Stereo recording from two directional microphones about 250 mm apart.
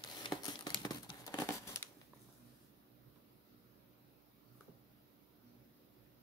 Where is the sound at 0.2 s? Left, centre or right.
Centre.